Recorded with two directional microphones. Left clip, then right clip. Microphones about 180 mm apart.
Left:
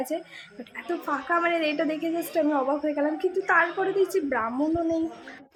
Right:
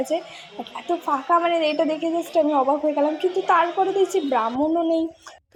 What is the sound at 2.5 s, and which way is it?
A woman's voice, centre (ahead or behind).